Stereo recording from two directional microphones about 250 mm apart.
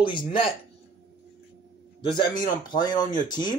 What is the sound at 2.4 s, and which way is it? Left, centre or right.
Speech, centre.